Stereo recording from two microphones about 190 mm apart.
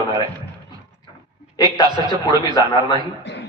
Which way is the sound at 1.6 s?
20° right (ahead or behind).